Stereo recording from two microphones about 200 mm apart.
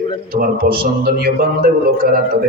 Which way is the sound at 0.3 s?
45° right (ahead or behind).